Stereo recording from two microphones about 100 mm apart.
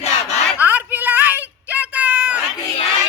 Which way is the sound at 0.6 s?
15° right (ahead or behind).